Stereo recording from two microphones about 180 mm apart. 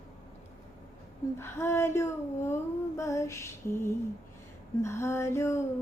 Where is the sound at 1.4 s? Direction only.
15° left (ahead or behind).